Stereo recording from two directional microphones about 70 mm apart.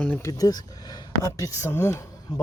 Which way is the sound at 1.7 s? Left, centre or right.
Left.